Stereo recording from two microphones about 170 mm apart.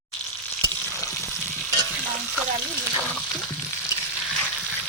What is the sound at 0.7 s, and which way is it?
Frying, 15° left (ahead or behind).